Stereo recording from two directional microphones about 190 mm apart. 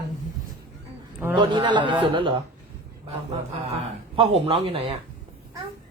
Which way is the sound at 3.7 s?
30° right (ahead or behind).